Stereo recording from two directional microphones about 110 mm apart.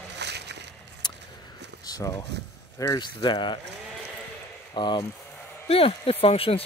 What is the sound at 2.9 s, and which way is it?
Speech, 45° left (ahead or behind).